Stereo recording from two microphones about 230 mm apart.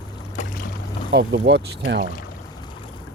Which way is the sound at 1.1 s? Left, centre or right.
Right.